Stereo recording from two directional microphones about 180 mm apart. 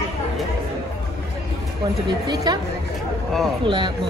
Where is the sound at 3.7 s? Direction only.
25° right (ahead or behind).